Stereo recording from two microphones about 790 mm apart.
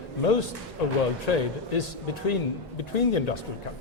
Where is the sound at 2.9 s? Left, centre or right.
Left.